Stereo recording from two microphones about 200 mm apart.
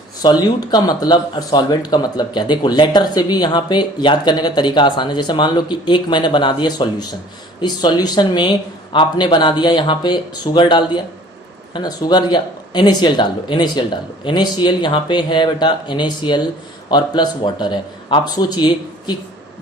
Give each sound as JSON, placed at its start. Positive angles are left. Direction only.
{"t": 0.2, "sound": "speech", "side_deg": 20}